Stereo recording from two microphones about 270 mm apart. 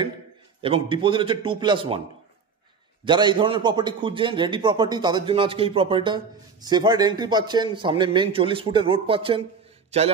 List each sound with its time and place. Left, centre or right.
0.6 s a man's voice: centre
3.1 s a man's voice: centre